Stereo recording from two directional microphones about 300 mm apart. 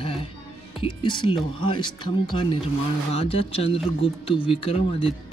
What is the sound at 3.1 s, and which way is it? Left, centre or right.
Speech, centre.